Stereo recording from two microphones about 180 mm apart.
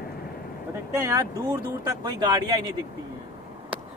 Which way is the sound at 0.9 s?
15° right (ahead or behind).